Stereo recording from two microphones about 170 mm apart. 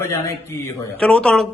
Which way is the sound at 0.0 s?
15° left (ahead or behind).